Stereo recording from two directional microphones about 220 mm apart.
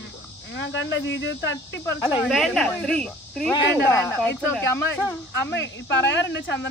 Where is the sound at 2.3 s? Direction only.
Centre (ahead or behind).